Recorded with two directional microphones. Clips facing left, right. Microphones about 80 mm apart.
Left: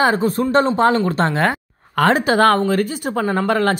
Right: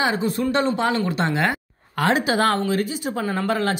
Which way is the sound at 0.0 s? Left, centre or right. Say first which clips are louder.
Left 5 dB; left.